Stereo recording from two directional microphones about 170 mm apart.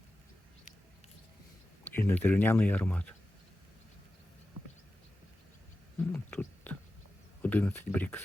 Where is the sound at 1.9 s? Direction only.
10° left (ahead or behind).